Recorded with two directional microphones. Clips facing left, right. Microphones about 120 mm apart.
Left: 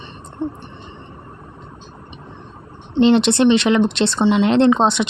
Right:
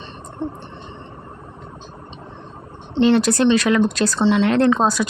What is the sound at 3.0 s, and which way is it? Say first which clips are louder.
Speech: left 2 dB; 20° left (ahead or behind).